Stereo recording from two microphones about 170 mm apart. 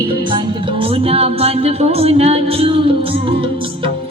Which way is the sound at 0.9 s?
35° right (ahead or behind).